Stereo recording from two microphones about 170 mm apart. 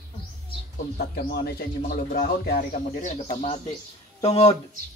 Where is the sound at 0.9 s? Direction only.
65° left (ahead or behind).